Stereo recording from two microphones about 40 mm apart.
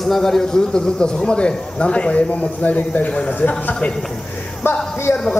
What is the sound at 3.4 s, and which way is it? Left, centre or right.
Speech, left.